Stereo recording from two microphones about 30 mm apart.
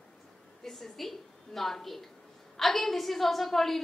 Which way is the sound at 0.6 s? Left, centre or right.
Centre.